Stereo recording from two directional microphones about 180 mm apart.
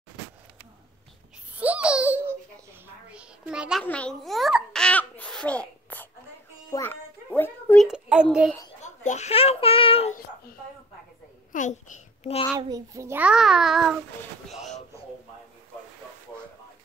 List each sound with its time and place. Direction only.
1.6 s giggle: 5° right (ahead or behind)
3.1 s a sound: 5° right (ahead or behind)
3.8 s babbling: 5° left (ahead or behind)
6.7 s music: 10° left (ahead or behind)
7.8 s child singing: 5° right (ahead or behind)
8.8 s a child's voice: 40° left (ahead or behind)
11.5 s babbling: 45° left (ahead or behind)
12.5 s a child's voice: 20° right (ahead or behind); by 14.8 s centre (ahead or behind)